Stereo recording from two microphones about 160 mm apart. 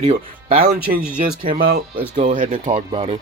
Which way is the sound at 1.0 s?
5° right (ahead or behind).